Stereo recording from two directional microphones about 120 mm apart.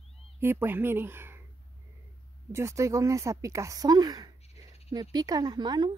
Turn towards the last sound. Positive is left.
turn(degrees=-40)  # may be behind; listen again after turning